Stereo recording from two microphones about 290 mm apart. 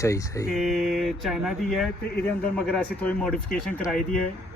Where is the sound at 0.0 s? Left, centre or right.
Centre.